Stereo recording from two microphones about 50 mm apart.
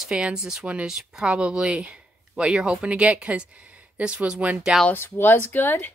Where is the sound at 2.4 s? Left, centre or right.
Centre.